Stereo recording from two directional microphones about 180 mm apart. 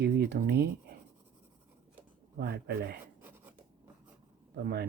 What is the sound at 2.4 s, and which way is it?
Speech, 65° right (ahead or behind).